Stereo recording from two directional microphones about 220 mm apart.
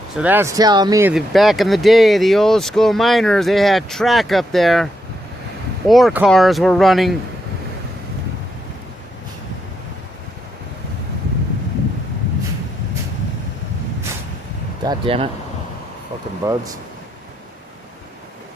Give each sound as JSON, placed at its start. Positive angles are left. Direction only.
{"t": 0.2, "sound": "speech", "side_deg": -10}
{"t": 1.1, "sound": "speech", "side_deg": 0}
{"t": 5.9, "sound": "speech", "side_deg": 0}
{"t": 14.8, "sound": "speech", "side_deg": -25}
{"t": 16.4, "sound": "speech", "side_deg": -15}